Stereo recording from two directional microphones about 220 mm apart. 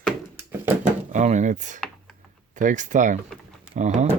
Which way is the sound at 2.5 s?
35° right (ahead or behind).